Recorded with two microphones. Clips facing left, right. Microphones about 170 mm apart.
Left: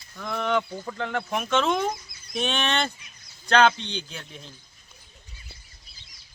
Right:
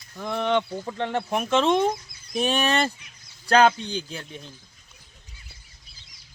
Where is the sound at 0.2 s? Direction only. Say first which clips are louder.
Right 2 dB; 30° right (ahead or behind).